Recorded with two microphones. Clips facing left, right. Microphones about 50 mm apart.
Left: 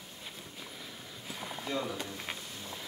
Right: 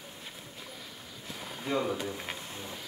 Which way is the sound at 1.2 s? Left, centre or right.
Centre.